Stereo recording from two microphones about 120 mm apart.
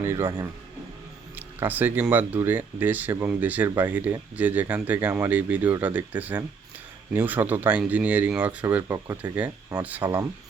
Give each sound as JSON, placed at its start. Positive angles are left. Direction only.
{"t": 0.0, "sound": "speech", "side_deg": -20}
{"t": 1.4, "sound": "speech", "side_deg": -15}
{"t": 8.9, "sound": "speech", "side_deg": -35}
{"t": 9.3, "sound": "speech", "side_deg": -15}
{"t": 10.0, "sound": "speech", "side_deg": -30}